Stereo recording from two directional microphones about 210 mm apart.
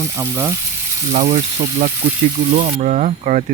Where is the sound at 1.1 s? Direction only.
35° right (ahead or behind).